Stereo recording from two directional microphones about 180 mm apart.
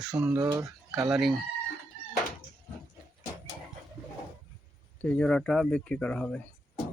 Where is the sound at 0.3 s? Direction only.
20° right (ahead or behind).